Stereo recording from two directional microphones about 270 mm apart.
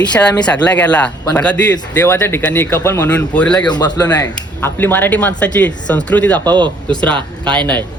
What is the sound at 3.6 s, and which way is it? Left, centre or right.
A man's voice, centre.